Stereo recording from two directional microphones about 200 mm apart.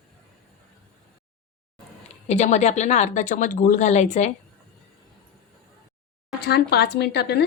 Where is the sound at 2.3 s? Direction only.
35° left (ahead or behind).